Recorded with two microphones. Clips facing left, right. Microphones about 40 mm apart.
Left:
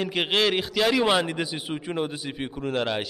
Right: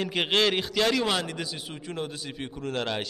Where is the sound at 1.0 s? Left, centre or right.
Centre.